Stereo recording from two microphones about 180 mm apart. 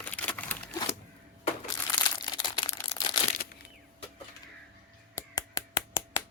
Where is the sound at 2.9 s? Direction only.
25° left (ahead or behind).